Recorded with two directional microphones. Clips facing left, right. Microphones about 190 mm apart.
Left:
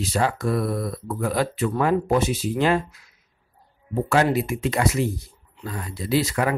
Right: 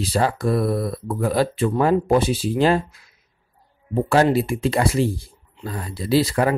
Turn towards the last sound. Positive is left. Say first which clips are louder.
# right 4 dB
turn(degrees=-35)  # may be behind; listen again after turning